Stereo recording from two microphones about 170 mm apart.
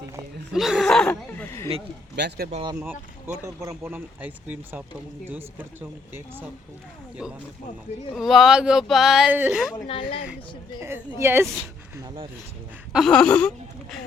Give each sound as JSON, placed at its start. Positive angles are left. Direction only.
{"t": 0.5, "sound": "a sound", "side_deg": 0}
{"t": 2.1, "sound": "speech", "side_deg": -90}
{"t": 2.7, "sound": "speech", "side_deg": -10}
{"t": 9.8, "sound": "speech", "side_deg": 30}
{"t": 10.8, "sound": "speech", "side_deg": -15}
{"t": 11.9, "sound": "speech", "side_deg": -30}
{"t": 12.9, "sound": "speech", "side_deg": 0}